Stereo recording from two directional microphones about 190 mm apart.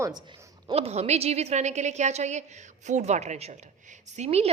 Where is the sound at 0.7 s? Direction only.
35° right (ahead or behind).